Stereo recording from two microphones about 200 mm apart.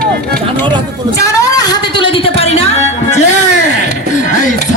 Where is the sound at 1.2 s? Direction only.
15° left (ahead or behind).